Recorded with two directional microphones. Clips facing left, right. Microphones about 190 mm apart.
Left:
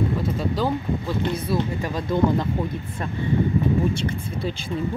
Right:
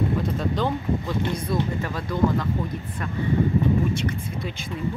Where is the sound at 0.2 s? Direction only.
5° left (ahead or behind); by 2.4 s 20° left (ahead or behind).